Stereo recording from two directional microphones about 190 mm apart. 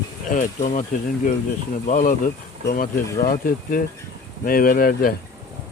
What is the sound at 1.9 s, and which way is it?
A man's voice, 40° left (ahead or behind).